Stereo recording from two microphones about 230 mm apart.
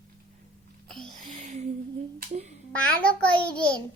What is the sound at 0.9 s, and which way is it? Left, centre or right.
Music, centre.